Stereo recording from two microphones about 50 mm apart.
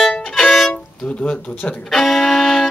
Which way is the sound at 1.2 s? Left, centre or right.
Left.